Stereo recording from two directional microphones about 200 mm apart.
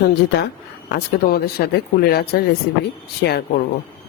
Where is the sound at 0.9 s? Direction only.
50° left (ahead or behind).